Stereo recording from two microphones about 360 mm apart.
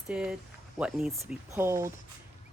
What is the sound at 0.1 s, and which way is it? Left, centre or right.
Speech, centre.